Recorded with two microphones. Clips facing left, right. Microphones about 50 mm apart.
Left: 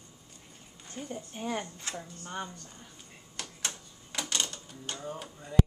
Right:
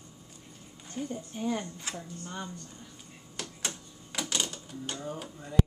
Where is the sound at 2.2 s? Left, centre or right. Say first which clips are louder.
Left 3 dB; left.